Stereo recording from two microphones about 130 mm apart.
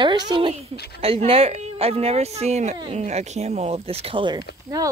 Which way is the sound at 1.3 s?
50° right (ahead or behind).